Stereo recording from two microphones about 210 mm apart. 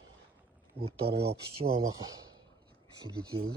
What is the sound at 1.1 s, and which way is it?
Speech, 50° right (ahead or behind).